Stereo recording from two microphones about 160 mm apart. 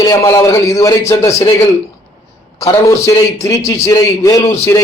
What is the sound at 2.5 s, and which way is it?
A man's voice, 20° left (ahead or behind).